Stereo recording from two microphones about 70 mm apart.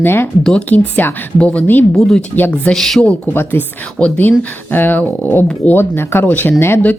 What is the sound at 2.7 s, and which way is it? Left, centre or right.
Speech, centre.